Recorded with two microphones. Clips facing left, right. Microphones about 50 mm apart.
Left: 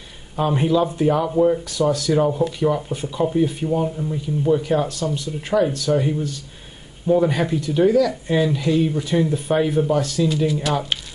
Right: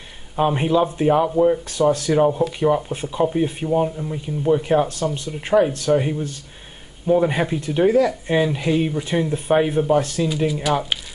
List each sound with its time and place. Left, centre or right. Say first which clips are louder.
0.4 s speech: right 1 dB; right
2.1 s speech: right 1 dB; centre
10.2 s speech: left 1 dB; centre